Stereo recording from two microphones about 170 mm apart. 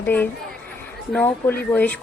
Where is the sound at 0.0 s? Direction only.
10° left (ahead or behind).